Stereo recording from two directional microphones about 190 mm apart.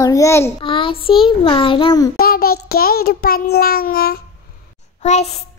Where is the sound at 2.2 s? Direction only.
50° left (ahead or behind).